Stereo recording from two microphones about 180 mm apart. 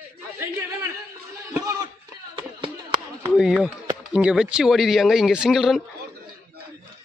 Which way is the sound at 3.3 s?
5° right (ahead or behind).